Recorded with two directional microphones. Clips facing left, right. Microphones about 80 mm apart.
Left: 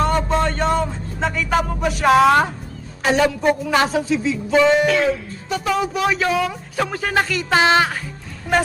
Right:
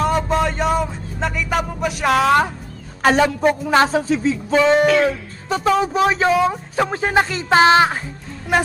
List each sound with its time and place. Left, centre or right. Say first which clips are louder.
0.0 s a man's voice: even; centre
3.0 s speech: right 2 dB; right
4.9 s a man's voice: right 2 dB; centre
5.5 s a man's voice: right 3 dB; right